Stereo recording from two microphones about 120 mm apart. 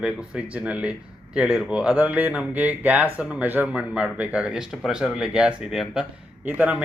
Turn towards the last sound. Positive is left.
turn(degrees=-15)  # may be behind; listen again after turning